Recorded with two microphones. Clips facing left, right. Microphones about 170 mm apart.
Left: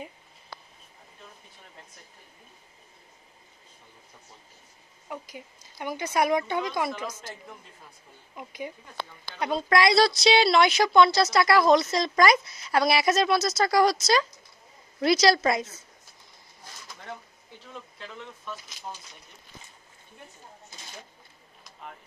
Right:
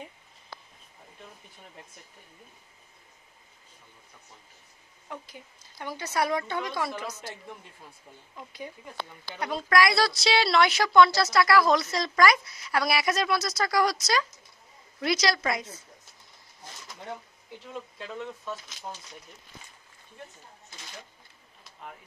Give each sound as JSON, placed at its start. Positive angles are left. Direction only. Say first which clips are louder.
{"t": 5.1, "sound": "speech", "louder": "left 3 dB", "side_deg": 15}
{"t": 7.1, "sound": "a woman's voice", "louder": "even", "side_deg": 45}
{"t": 8.4, "sound": "speech", "louder": "left 4 dB", "side_deg": 15}
{"t": 9.4, "sound": "a woman's voice", "louder": "left 2 dB", "side_deg": 25}